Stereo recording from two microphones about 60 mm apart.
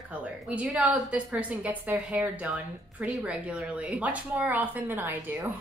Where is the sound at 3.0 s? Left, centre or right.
Centre.